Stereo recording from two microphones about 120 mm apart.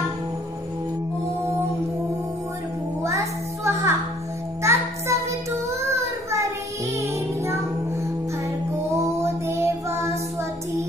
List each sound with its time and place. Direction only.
3.0 s music: 25° right (ahead or behind)
5.7 s child singing: 25° right (ahead or behind)
7.0 s music: 25° right (ahead or behind)
8.9 s music: 20° right (ahead or behind)